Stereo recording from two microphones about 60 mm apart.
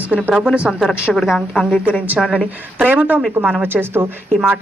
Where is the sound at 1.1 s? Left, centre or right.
Centre.